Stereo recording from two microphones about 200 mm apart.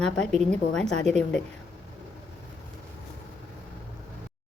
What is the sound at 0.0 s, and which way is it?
A woman's voice, 5° left (ahead or behind).